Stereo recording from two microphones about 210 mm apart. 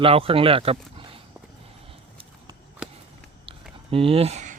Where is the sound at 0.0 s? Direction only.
25° right (ahead or behind).